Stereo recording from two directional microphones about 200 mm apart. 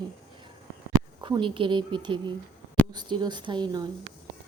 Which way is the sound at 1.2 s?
20° right (ahead or behind).